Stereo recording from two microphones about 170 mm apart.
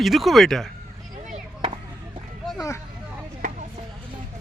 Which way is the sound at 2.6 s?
15° left (ahead or behind).